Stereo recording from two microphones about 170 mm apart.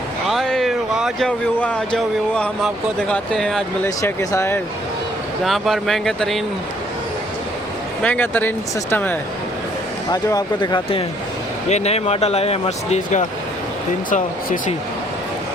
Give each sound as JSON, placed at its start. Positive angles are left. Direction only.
{"t": 0.3, "sound": "a sound", "side_deg": 0}
{"t": 1.5, "sound": "speech", "side_deg": 5}
{"t": 3.8, "sound": "speech", "side_deg": 20}
{"t": 5.5, "sound": "speech", "side_deg": 0}
{"t": 8.0, "sound": "speech", "side_deg": 10}
{"t": 10.1, "sound": "speech", "side_deg": 20}
{"t": 11.7, "sound": "speech", "side_deg": 40}